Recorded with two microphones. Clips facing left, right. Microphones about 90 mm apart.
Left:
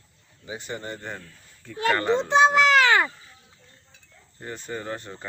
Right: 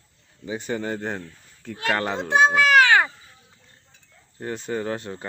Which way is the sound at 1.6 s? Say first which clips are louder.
Left 1 dB; 70° right (ahead or behind).